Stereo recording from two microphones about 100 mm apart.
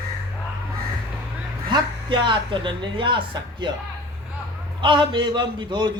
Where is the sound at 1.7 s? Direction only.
50° right (ahead or behind).